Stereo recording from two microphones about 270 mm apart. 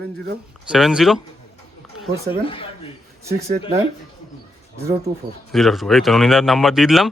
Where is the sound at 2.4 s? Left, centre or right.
Centre.